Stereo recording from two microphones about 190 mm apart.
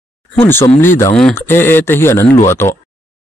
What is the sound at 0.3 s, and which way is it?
Speech, 10° left (ahead or behind).